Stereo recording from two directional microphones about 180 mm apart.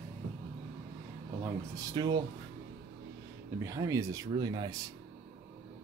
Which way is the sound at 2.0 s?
25° right (ahead or behind).